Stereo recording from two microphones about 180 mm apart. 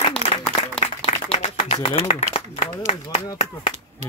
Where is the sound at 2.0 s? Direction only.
35° left (ahead or behind).